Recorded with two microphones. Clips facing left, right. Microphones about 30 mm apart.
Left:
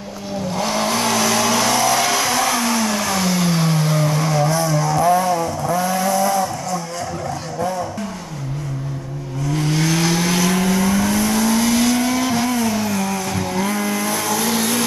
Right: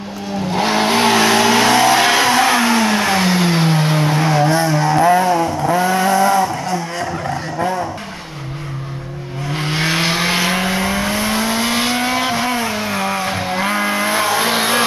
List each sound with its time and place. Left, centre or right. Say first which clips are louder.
0.5 s vehicle: right 5 dB; right
9.5 s vehicle: right 1 dB; right